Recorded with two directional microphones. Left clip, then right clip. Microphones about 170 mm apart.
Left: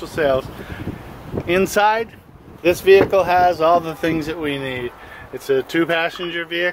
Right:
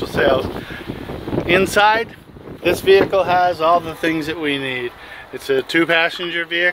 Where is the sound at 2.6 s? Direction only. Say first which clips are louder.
Left 1 dB; 10° left (ahead or behind).